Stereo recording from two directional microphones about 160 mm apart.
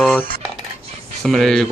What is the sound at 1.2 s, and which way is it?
Speech, centre (ahead or behind).